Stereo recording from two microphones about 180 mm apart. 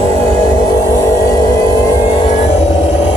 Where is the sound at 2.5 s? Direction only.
35° left (ahead or behind).